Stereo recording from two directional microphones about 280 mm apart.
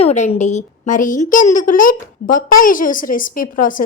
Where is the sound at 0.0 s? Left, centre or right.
Left.